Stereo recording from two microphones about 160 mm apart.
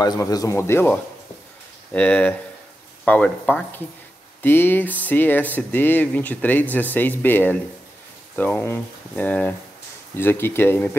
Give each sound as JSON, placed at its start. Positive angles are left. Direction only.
{"t": 0.0, "sound": "speech", "side_deg": 25}